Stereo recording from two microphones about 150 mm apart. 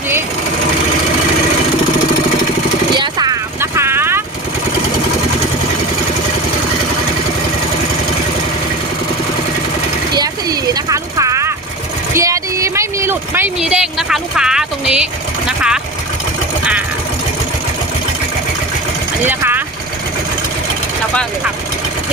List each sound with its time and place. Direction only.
3.0 s vehicle: 25° right (ahead or behind)
10.2 s vehicle: 25° right (ahead or behind)
12.1 s a sound: 20° right (ahead or behind)
13.6 s a sound: 5° right (ahead or behind)
15.4 s vehicle: 5° right (ahead or behind)
19.2 s vehicle: 15° right (ahead or behind)